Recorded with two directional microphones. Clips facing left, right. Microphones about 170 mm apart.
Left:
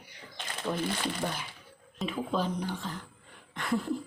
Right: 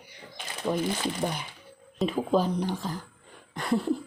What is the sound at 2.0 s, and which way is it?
Speech, 40° right (ahead or behind).